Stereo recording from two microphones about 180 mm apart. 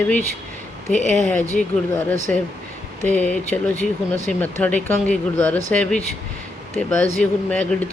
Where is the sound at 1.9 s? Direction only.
10° left (ahead or behind).